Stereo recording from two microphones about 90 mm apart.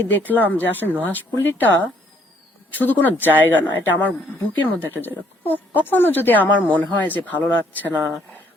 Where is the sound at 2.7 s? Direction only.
20° left (ahead or behind).